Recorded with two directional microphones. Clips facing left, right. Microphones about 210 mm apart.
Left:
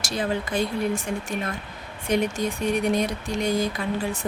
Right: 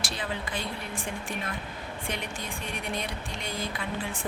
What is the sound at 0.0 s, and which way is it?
A woman's voice, 45° left (ahead or behind).